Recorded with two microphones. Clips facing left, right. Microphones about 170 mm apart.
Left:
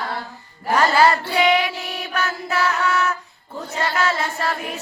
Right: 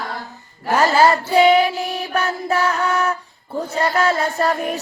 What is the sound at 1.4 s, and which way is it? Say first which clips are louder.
Child singing: right 8 dB; 30° right (ahead or behind).